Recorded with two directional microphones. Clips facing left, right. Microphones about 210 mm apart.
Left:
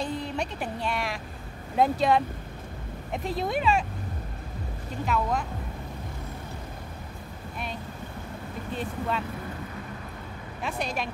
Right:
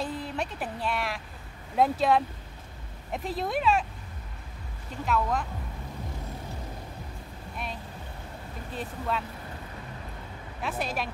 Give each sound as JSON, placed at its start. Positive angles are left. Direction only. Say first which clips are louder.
{"t": 0.0, "sound": "a woman's voice", "louder": "left 2 dB", "side_deg": -5}
{"t": 5.0, "sound": "speech", "louder": "even", "side_deg": 0}
{"t": 8.7, "sound": "speech", "louder": "left 1 dB", "side_deg": 0}
{"t": 10.6, "sound": "speech", "louder": "even", "side_deg": -5}